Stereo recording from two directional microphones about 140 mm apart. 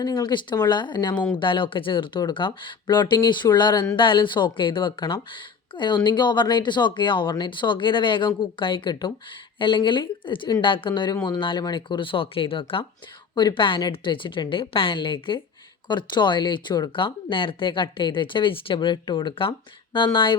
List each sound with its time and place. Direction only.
0.0 s speech: 30° left (ahead or behind)